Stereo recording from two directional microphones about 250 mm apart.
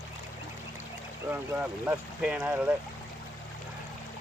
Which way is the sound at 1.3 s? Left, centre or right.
Centre.